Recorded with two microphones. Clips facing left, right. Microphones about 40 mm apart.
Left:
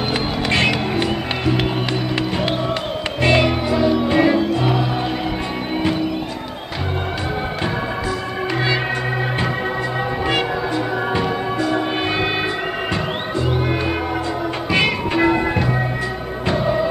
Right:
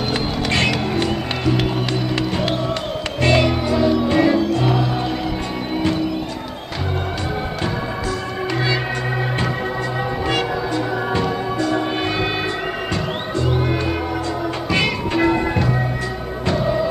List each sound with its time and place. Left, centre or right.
0.5 s music: centre
3.2 s music: centre
11.1 s music: centre
14.7 s music: centre